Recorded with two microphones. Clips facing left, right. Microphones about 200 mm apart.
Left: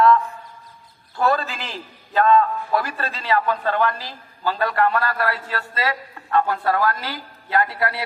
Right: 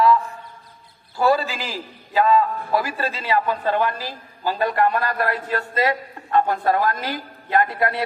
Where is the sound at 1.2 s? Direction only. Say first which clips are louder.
Right 2 dB; 5° right (ahead or behind).